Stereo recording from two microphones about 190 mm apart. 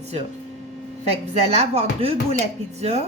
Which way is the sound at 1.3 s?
35° right (ahead or behind).